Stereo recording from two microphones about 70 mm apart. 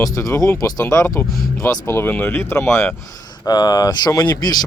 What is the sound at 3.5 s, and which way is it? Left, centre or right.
Speech, left.